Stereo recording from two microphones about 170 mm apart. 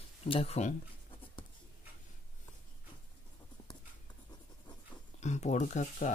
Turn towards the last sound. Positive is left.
turn(degrees=45)  # may be behind; listen again after turning